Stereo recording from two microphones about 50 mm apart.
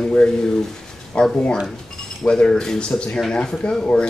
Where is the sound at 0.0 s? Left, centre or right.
Centre.